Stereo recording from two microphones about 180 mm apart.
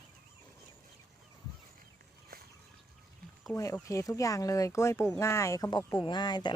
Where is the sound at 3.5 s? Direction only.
15° left (ahead or behind).